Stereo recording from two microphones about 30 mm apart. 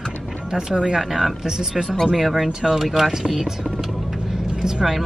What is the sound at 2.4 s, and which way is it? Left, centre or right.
Speech, centre.